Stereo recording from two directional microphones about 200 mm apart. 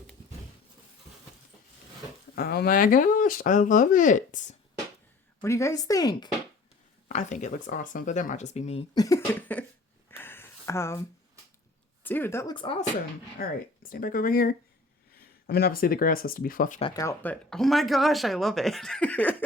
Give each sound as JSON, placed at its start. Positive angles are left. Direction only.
{"t": 2.3, "sound": "speech", "side_deg": 50}
{"t": 5.4, "sound": "speech", "side_deg": 15}
{"t": 7.1, "sound": "speech", "side_deg": 35}
{"t": 9.0, "sound": "speech", "side_deg": 15}
{"t": 10.1, "sound": "a sound", "side_deg": 10}
{"t": 12.0, "sound": "speech", "side_deg": 10}
{"t": 13.4, "sound": "speech", "side_deg": 45}
{"t": 16.8, "sound": "speech", "side_deg": 20}
{"t": 17.5, "sound": "speech", "side_deg": 0}